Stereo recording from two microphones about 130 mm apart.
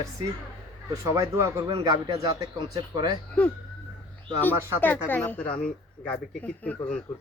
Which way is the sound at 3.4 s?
10° left (ahead or behind).